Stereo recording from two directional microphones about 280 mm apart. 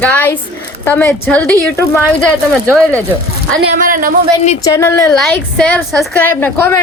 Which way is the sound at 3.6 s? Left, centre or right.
Right.